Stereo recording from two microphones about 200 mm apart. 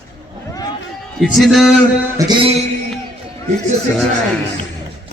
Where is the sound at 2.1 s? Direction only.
20° right (ahead or behind).